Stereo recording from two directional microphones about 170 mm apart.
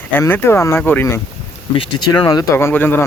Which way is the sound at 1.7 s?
30° left (ahead or behind).